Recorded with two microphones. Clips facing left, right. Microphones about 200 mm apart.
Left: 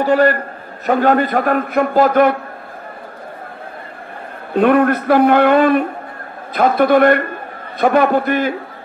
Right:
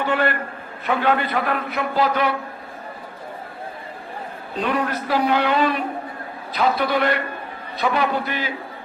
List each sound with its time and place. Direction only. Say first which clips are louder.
0.0 s a man's voice: left 8 dB; 40° left (ahead or behind)
4.6 s a man's voice: left 11 dB; 55° left (ahead or behind)